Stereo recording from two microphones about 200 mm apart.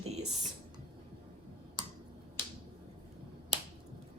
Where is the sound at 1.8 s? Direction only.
20° right (ahead or behind).